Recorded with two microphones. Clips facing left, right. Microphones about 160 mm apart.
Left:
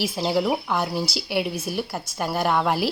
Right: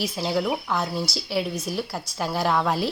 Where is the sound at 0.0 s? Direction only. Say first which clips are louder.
Left 2 dB; 25° left (ahead or behind).